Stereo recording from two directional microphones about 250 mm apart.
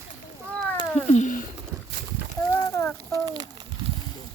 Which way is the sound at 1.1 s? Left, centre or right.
Left.